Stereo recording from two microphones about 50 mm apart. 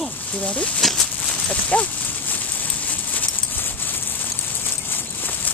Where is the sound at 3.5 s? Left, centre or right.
Left.